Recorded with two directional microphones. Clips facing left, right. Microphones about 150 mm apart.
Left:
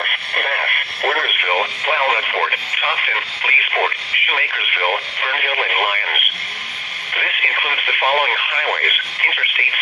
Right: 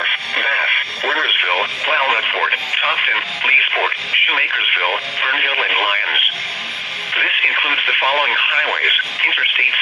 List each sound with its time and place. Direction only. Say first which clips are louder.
0.0 s radio: left 1 dB; 50° left (ahead or behind)
1.8 s radio: left 1 dB; 35° left (ahead or behind)